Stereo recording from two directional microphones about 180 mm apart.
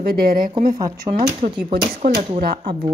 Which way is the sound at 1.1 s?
30° right (ahead or behind).